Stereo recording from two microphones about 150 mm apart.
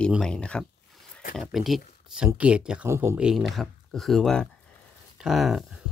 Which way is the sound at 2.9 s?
20° right (ahead or behind).